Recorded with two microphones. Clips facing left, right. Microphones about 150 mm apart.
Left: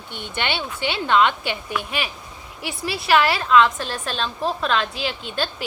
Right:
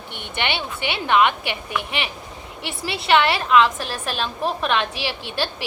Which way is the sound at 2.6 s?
Centre (ahead or behind).